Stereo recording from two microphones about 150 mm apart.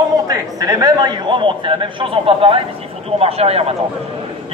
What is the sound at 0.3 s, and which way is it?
A man's voice, 25° right (ahead or behind).